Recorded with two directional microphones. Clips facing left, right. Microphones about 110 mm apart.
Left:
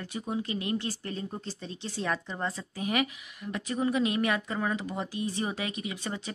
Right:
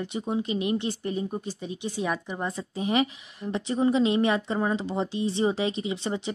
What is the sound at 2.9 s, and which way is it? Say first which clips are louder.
A woman's voice: right 4 dB; 25° right (ahead or behind).